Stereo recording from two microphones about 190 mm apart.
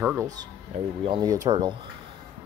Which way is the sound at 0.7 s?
35° right (ahead or behind).